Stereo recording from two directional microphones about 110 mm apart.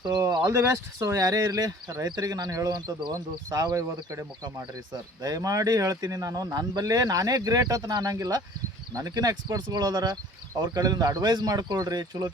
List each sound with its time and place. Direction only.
0.0 s speech: 35° right (ahead or behind)